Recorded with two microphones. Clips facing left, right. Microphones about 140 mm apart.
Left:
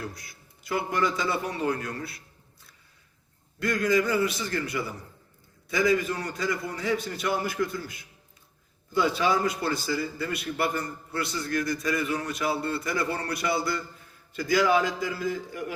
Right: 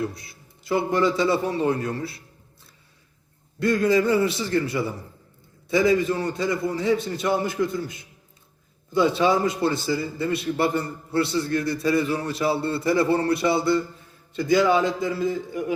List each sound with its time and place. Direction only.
0.0 s a man's voice: 25° right (ahead or behind)
3.6 s a man's voice: 30° right (ahead or behind)